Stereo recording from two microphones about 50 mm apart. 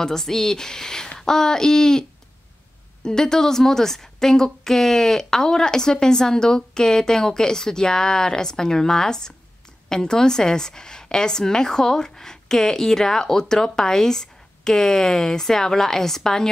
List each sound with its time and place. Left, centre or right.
0.0 s a woman's voice: centre